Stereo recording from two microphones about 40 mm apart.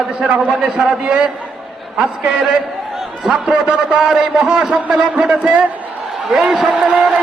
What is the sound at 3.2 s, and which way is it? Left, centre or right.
A man's voice, right.